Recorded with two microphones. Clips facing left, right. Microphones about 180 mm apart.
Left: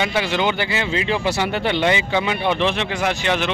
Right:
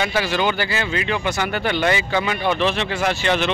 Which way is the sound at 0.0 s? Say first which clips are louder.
Even; 20° left (ahead or behind).